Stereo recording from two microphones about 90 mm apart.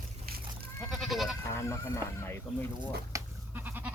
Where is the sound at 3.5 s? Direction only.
20° right (ahead or behind).